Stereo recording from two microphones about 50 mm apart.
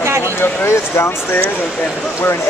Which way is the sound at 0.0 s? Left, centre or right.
Right.